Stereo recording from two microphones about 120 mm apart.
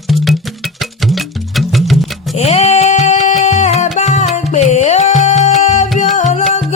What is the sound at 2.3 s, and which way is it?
Music, 60° left (ahead or behind).